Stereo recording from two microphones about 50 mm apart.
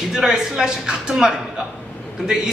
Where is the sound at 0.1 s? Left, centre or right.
Centre.